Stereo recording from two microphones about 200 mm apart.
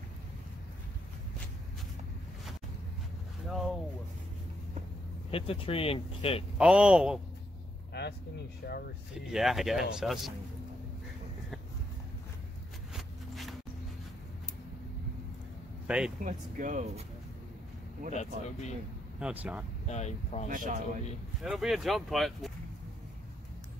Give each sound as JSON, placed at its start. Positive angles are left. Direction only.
{"t": 3.4, "sound": "a sound", "side_deg": 0}
{"t": 5.3, "sound": "speech", "side_deg": 30}
{"t": 6.6, "sound": "speech", "side_deg": -5}
{"t": 8.6, "sound": "speech", "side_deg": 55}
{"t": 9.3, "sound": "speech", "side_deg": 0}
{"t": 12.9, "sound": "a sound", "side_deg": 0}
{"t": 15.9, "sound": "speech", "side_deg": -5}
{"t": 16.3, "sound": "speech", "side_deg": -40}
{"t": 18.1, "sound": "speech", "side_deg": 35}
{"t": 19.1, "sound": "speech", "side_deg": -5}
{"t": 19.9, "sound": "speech", "side_deg": 35}
{"t": 20.4, "sound": "speech", "side_deg": -40}
{"t": 21.4, "sound": "speech", "side_deg": 0}